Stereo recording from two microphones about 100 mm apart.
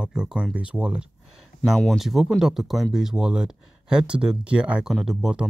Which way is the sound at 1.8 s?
Centre (ahead or behind).